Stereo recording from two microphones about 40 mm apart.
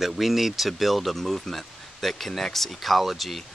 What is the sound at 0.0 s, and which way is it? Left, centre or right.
Speech, centre.